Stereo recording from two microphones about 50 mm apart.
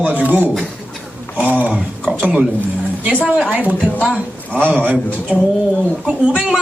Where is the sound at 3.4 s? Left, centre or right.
Right.